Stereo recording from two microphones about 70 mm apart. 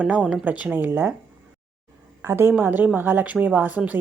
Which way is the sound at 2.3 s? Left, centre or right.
Right.